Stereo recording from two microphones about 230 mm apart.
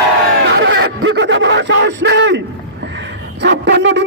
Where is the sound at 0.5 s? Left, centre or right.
Right.